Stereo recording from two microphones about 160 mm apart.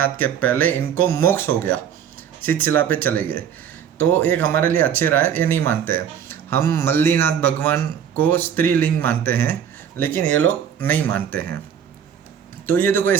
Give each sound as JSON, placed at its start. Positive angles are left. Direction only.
{"t": 0.0, "sound": "speech", "side_deg": 10}
{"t": 12.6, "sound": "speech", "side_deg": 15}